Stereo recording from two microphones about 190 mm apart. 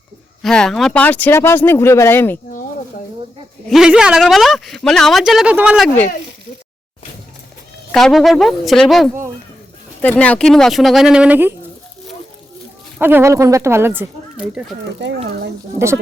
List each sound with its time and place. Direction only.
0.4 s speech: 5° left (ahead or behind)
3.7 s a woman's voice: 5° right (ahead or behind)
7.9 s a woman's voice: centre (ahead or behind)
13.0 s speech: 10° right (ahead or behind)
15.0 s speech: 65° right (ahead or behind)